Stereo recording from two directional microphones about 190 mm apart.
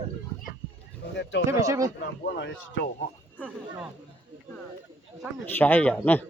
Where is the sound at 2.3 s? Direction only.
70° left (ahead or behind).